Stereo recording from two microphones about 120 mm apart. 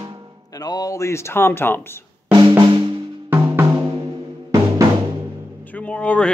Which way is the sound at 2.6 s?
45° right (ahead or behind).